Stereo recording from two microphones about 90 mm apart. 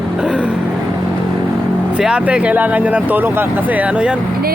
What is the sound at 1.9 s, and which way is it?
Speech, 10° right (ahead or behind).